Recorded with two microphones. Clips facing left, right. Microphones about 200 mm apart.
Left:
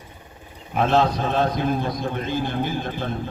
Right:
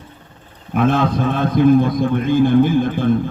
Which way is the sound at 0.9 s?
55° right (ahead or behind).